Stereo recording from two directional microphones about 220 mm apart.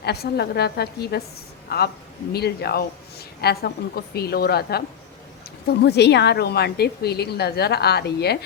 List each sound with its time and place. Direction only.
0.0 s a woman's voice: 45° left (ahead or behind)